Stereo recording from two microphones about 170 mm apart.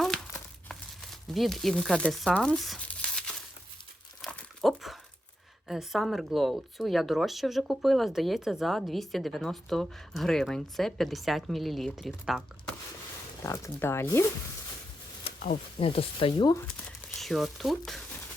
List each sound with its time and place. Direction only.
1.3 s speech: centre (ahead or behind)
4.2 s crumpling: centre (ahead or behind)
5.6 s speech: centre (ahead or behind)
13.4 s speech: 15° left (ahead or behind)
15.8 s speech: 30° left (ahead or behind)
17.2 s speech: centre (ahead or behind)